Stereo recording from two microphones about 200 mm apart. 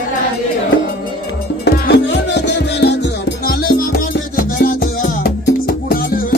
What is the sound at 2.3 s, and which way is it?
Music, 60° left (ahead or behind).